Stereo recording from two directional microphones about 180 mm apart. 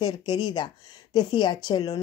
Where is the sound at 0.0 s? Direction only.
25° left (ahead or behind).